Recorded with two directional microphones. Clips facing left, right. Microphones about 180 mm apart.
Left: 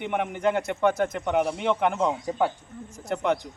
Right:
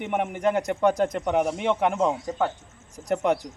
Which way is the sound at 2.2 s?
10° left (ahead or behind).